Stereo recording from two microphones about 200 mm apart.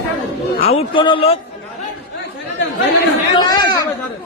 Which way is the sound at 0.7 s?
25° left (ahead or behind).